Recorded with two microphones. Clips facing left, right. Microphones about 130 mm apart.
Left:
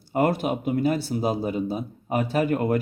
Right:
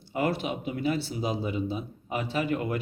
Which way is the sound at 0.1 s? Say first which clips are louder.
Left 6 dB; 45° left (ahead or behind).